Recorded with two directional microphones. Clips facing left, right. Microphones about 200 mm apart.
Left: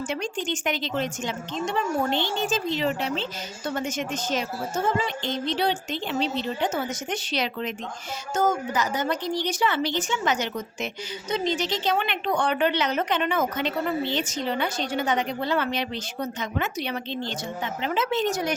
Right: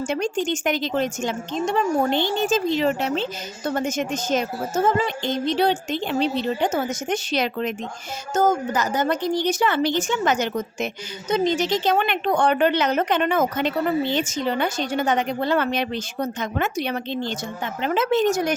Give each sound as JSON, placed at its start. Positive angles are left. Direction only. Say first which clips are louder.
{"t": 0.1, "sound": "a woman's voice", "louder": "right 6 dB", "side_deg": -45}